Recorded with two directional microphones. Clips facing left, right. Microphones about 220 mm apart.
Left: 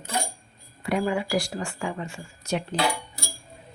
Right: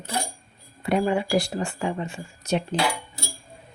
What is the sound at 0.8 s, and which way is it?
Speech, 25° right (ahead or behind).